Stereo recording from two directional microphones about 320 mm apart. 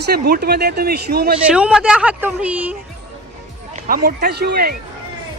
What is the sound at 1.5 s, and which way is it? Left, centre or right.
Speech, centre.